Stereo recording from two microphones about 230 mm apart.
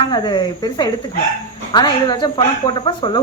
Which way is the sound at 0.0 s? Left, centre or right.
Centre.